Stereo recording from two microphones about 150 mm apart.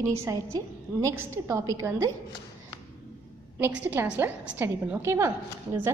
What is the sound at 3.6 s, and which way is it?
A woman's voice, 15° right (ahead or behind).